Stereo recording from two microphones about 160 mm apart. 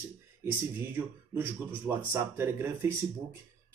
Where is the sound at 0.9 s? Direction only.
15° right (ahead or behind).